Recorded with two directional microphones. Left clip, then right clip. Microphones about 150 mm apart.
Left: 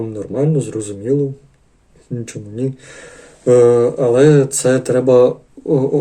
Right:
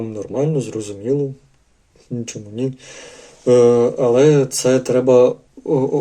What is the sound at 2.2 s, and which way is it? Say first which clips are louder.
Speech: left 1 dB; 5° right (ahead or behind).